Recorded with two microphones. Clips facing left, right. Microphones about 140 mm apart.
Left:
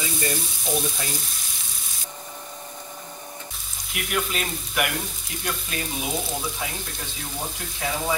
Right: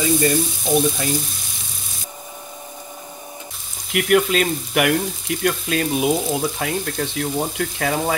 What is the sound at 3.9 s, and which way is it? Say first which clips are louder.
Speech: right 11 dB; 70° right (ahead or behind).